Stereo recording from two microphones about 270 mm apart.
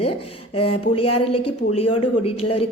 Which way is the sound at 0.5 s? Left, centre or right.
Left.